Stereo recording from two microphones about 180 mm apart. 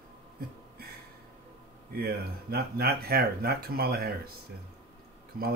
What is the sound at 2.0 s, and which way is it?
Speech, 60° right (ahead or behind).